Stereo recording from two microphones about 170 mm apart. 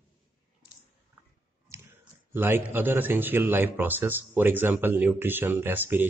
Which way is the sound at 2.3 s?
10° right (ahead or behind).